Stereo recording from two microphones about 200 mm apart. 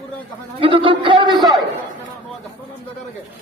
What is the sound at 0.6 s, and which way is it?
Speech, 25° right (ahead or behind).